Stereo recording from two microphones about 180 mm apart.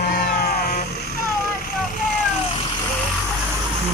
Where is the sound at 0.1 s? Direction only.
55° left (ahead or behind).